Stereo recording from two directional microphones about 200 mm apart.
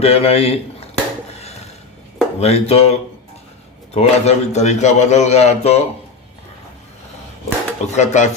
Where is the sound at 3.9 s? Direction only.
35° left (ahead or behind).